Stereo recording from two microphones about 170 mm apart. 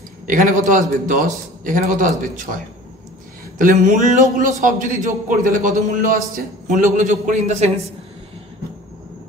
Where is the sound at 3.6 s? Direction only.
50° right (ahead or behind).